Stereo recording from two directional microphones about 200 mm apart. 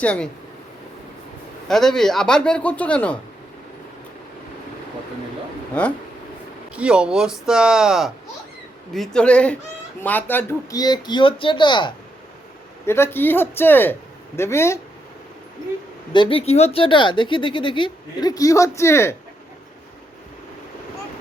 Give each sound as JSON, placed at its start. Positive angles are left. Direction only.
{"t": 0.0, "sound": "a man's voice", "side_deg": 5}
{"t": 1.6, "sound": "a man's voice", "side_deg": 0}
{"t": 6.7, "sound": "a man's voice", "side_deg": -5}
{"t": 12.8, "sound": "a man's voice", "side_deg": 10}
{"t": 16.1, "sound": "speech", "side_deg": 25}